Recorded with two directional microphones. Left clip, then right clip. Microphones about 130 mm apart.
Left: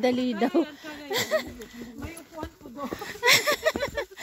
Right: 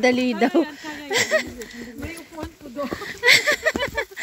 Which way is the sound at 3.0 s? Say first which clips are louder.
Right 5 dB; 50° left (ahead or behind).